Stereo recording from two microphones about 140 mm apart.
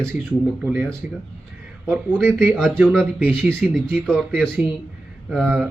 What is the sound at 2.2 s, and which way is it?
Speech, 10° right (ahead or behind).